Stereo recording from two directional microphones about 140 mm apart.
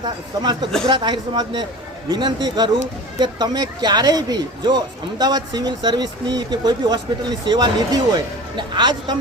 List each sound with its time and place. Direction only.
0.0 s speech: 30° right (ahead or behind)